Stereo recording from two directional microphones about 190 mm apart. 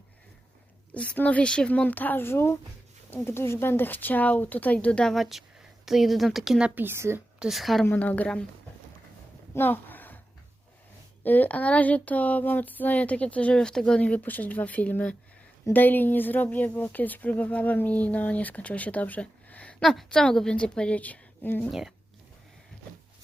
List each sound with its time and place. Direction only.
0.9 s a woman's voice: 5° left (ahead or behind)
9.6 s a sound: 10° left (ahead or behind)
11.2 s speech: 10° left (ahead or behind)
21.7 s a woman's voice: centre (ahead or behind)